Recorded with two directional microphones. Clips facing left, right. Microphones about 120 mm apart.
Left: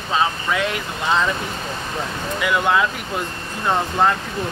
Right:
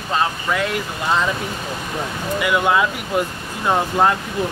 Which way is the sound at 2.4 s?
5° right (ahead or behind).